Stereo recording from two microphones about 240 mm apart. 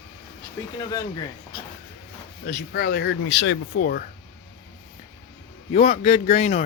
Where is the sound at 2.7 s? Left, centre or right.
Left.